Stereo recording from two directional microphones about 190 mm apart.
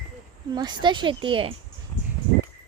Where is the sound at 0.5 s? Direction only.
25° right (ahead or behind).